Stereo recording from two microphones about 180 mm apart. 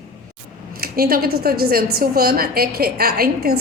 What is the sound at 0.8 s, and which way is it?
A woman's voice, 55° right (ahead or behind).